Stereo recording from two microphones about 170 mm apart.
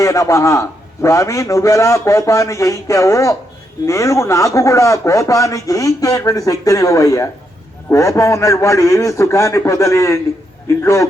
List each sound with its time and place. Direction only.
0.0 s a man's voice: 20° left (ahead or behind)